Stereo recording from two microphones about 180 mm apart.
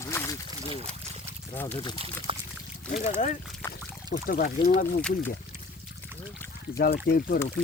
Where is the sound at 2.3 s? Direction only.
30° right (ahead or behind).